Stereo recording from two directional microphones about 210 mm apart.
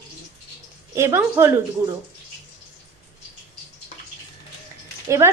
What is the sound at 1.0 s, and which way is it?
Speech, 10° right (ahead or behind).